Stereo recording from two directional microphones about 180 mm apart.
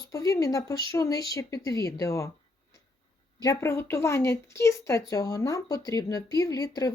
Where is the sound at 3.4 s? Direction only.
15° left (ahead or behind).